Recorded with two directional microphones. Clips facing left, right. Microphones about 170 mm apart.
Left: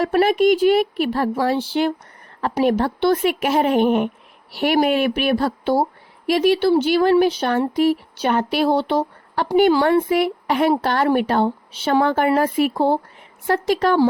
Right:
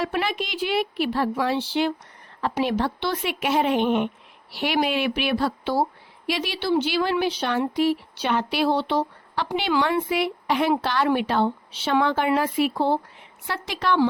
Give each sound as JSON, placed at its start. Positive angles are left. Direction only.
{"t": 0.0, "sound": "speech", "side_deg": 45}